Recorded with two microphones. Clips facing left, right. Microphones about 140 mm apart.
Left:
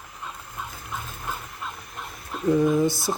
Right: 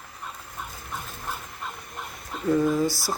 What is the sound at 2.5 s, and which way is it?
Speech, 20° left (ahead or behind).